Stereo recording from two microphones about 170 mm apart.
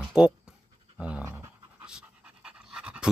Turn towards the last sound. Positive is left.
turn(degrees=-5)  # may be behind; listen again after turning